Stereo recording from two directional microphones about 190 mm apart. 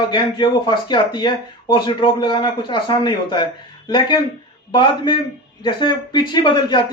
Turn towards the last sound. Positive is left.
turn(degrees=25)  # may be behind; listen again after turning